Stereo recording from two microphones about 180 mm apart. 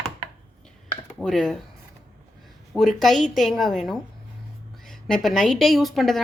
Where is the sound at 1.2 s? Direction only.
Centre (ahead or behind).